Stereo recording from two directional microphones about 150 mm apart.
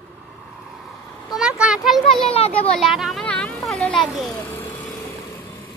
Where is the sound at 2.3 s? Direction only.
40° left (ahead or behind).